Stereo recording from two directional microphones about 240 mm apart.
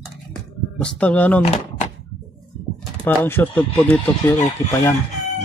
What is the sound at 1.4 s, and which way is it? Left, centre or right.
Door, left.